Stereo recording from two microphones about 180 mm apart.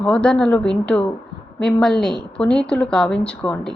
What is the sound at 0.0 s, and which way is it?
A woman's voice, 5° left (ahead or behind).